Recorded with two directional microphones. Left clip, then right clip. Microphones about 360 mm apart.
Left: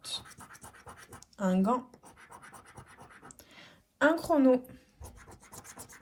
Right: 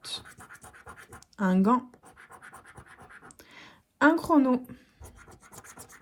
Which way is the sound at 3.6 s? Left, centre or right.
Centre.